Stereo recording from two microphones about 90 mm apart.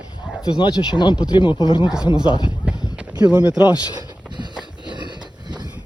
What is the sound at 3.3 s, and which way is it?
Speech, 15° right (ahead or behind).